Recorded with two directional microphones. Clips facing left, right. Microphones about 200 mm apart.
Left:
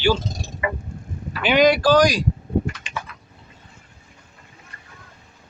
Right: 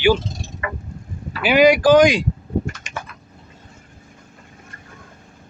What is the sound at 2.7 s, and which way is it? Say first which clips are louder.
Typing: even; 45° right (ahead or behind).